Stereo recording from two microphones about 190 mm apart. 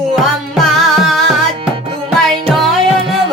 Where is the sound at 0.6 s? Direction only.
Centre (ahead or behind).